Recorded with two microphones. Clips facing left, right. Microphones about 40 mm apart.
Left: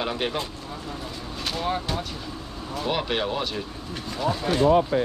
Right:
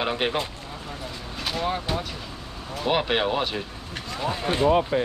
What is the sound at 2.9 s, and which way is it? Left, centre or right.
Speech, centre.